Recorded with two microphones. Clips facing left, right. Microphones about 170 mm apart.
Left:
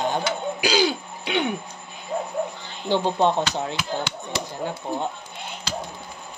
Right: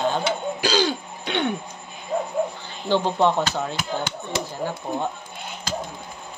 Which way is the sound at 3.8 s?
50° right (ahead or behind).